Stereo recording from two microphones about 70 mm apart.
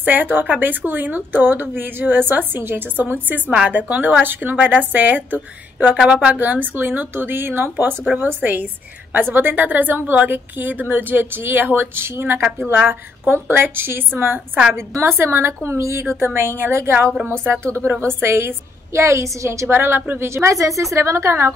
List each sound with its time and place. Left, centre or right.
0.0 s speech: right
6.0 s speech: centre
6.4 s a woman's voice: right
19.7 s a woman's voice: right